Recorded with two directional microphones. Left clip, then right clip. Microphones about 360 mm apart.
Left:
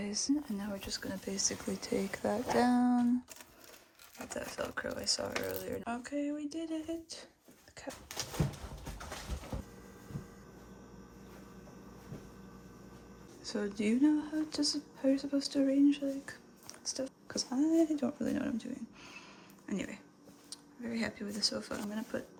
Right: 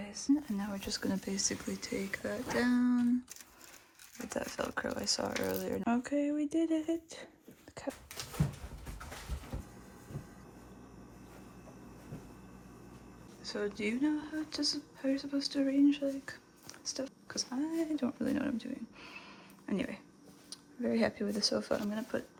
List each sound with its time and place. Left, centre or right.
0.0 s speech: centre
4.3 s speech: centre
8.1 s dog: left
13.4 s speech: centre